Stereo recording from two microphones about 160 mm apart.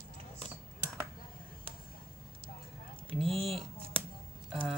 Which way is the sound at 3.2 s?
35° right (ahead or behind).